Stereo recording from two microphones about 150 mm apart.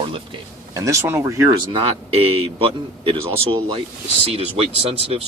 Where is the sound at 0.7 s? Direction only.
20° right (ahead or behind).